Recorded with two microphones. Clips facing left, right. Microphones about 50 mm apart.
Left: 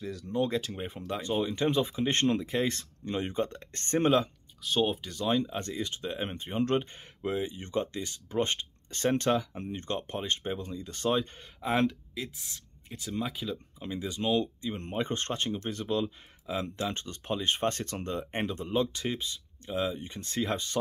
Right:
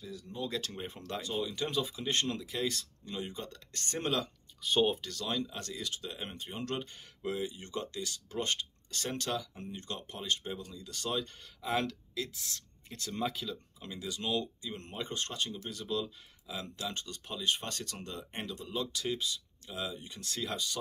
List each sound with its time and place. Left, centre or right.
0.0 s speech: left
0.6 s speech: centre
1.2 s speech: left
4.6 s speech: centre
5.0 s speech: left